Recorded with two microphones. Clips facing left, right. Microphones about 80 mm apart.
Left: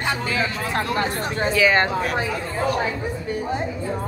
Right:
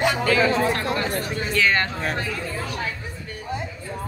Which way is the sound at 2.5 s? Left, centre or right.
Left.